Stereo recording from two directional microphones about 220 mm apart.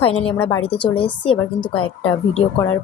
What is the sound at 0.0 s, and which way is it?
Speech, 25° left (ahead or behind).